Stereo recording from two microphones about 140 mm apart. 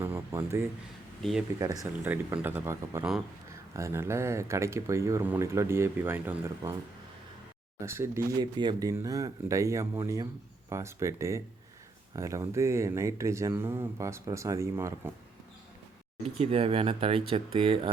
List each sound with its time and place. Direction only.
0.0 s a sound: 15° right (ahead or behind)
1.2 s speech: centre (ahead or behind)
1.5 s speech: 25° right (ahead or behind)
2.0 s speech: 15° right (ahead or behind)
7.8 s speech: 20° right (ahead or behind)
16.2 s speech: 45° right (ahead or behind)